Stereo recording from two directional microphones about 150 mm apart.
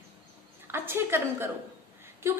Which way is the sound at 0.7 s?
15° right (ahead or behind).